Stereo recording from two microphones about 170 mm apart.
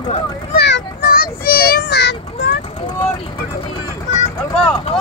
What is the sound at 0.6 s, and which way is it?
Child singing, 80° left.